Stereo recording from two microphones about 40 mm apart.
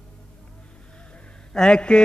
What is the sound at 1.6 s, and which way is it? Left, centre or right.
Mantra, left.